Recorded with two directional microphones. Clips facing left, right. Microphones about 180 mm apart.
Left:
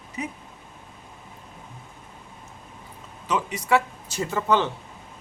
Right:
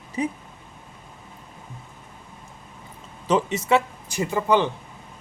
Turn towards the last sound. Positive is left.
turn(degrees=-15)  # may be behind; listen again after turning